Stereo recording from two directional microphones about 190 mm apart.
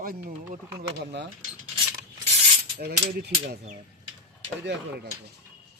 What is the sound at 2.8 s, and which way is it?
Speech, 60° right (ahead or behind).